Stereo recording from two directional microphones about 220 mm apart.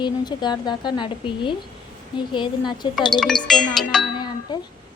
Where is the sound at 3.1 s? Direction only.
Centre (ahead or behind).